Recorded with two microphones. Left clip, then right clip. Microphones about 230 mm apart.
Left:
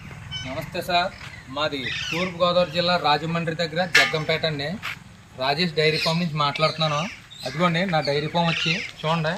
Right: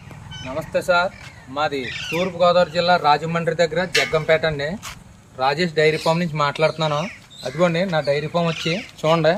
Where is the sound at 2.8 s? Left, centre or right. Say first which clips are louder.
Right 5 dB; centre.